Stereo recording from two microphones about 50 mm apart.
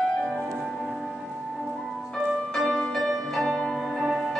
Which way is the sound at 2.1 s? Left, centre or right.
Centre.